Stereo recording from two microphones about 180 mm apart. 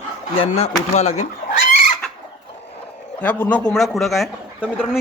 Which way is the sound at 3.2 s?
10° left (ahead or behind).